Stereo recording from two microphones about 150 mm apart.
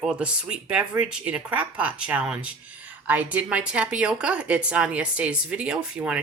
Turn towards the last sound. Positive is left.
turn(degrees=-5)  # may be behind; listen again after turning